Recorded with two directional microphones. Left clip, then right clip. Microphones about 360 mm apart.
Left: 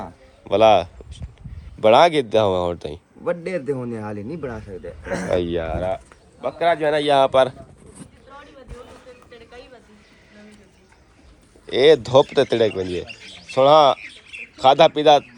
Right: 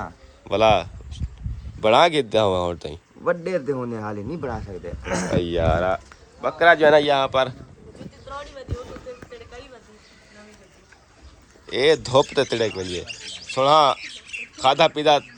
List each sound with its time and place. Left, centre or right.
0.0 s speech: centre
5.0 s speech: centre
5.3 s speech: centre
6.7 s a man's voice: right
7.0 s speech: centre
9.3 s a sound: right
11.6 s speech: centre